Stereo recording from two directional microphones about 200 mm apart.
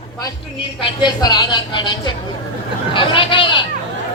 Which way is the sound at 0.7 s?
20° left (ahead or behind).